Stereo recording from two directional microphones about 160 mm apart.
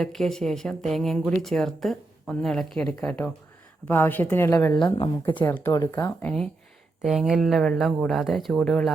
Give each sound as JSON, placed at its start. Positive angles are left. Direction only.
{"t": 0.0, "sound": "speech", "side_deg": 0}
{"t": 5.4, "sound": "speech", "side_deg": 10}
{"t": 6.2, "sound": "speech", "side_deg": 5}